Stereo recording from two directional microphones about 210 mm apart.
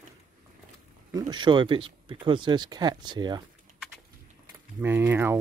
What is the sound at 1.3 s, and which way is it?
Speech, 20° right (ahead or behind).